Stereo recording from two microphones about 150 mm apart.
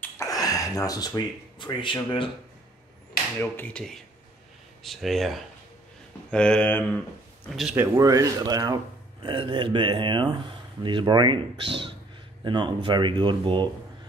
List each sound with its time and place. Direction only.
0.0 s speech: 20° left (ahead or behind)
3.3 s speech: 10° left (ahead or behind)
7.7 s speech: 15° right (ahead or behind)